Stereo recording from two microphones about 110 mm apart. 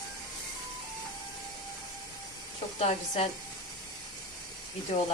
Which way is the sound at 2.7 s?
75° left (ahead or behind).